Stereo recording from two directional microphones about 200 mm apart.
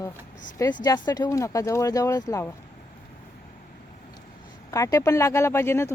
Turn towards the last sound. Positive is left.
turn(degrees=15)  # may be behind; listen again after turning